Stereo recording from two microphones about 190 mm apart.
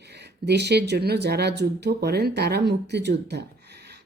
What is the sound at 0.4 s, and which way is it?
Speech, 60° right (ahead or behind).